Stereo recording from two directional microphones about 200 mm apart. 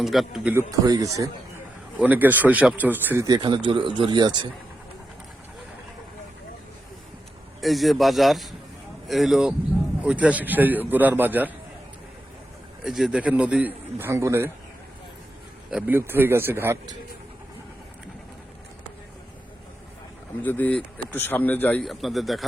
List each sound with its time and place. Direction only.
0.0 s a man's voice: centre (ahead or behind)
0.7 s a man's voice: 15° right (ahead or behind)
7.6 s a man's voice: centre (ahead or behind)
12.8 s a man's voice: centre (ahead or behind)
15.7 s a man's voice: 10° right (ahead or behind)
20.4 s a man's voice: 10° left (ahead or behind)